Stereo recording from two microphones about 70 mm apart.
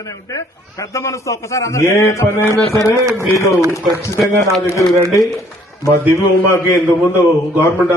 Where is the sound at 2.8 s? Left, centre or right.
Left.